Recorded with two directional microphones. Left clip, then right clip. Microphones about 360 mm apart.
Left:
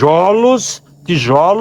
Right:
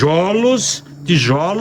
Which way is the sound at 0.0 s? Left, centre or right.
Centre.